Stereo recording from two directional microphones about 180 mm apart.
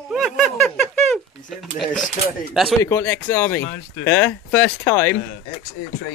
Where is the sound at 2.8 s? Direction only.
15° left (ahead or behind).